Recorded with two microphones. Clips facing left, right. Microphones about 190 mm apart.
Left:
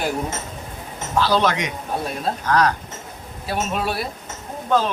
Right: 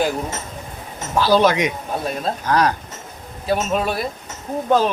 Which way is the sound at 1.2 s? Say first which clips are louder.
Right 5 dB; 10° right (ahead or behind).